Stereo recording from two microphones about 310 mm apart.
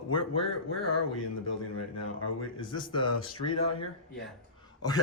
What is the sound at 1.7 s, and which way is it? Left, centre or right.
Speech, left.